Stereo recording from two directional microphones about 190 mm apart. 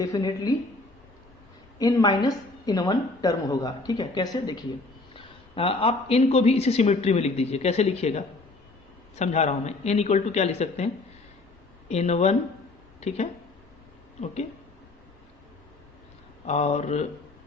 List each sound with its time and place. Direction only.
0.0 s a woman's voice: 20° left (ahead or behind)
1.8 s a woman's voice: 20° left (ahead or behind); by 10.8 s 35° left (ahead or behind)
11.9 s speech: 35° left (ahead or behind)
16.5 s speech: 35° left (ahead or behind)